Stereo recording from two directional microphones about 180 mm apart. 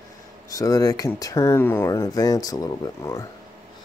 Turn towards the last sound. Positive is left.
turn(degrees=20)  # may be behind; listen again after turning